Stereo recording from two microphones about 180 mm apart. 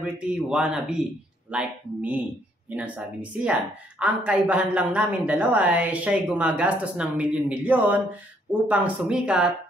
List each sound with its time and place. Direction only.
0.0 s a woman's voice: 5° right (ahead or behind)